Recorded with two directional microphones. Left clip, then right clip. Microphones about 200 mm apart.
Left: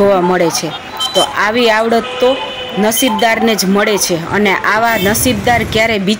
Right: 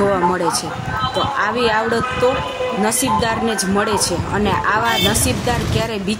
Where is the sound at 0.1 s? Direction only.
15° left (ahead or behind).